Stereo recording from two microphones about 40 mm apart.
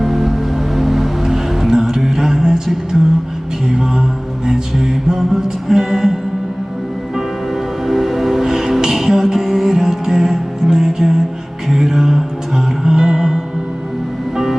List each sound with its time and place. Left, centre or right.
0.0 s music: centre
4.4 s music: centre
7.2 s music: centre